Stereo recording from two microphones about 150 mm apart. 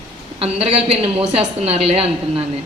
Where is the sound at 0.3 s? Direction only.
45° right (ahead or behind).